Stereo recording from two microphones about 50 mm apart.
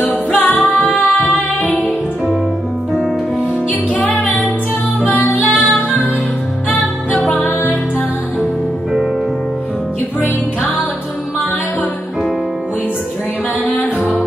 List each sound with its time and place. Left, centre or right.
0.3 s music: left
3.9 s music: left
7.1 s music: left